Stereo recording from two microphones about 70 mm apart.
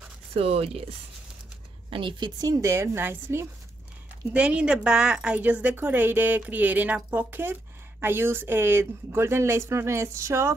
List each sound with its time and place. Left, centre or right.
2.1 s speech: right
2.6 s speech: right
4.3 s speech: centre
5.4 s speech: right